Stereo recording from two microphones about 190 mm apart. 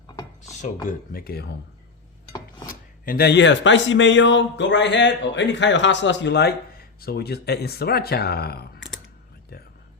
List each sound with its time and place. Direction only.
0.4 s speech: 40° left (ahead or behind)
2.6 s speech: 50° left (ahead or behind); by 6.5 s 65° left (ahead or behind)
7.0 s speech: 55° left (ahead or behind)